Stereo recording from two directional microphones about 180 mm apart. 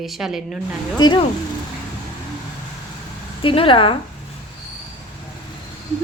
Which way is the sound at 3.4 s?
30° left (ahead or behind).